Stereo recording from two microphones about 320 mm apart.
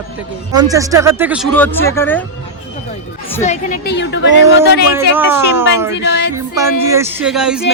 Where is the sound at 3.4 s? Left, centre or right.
Left.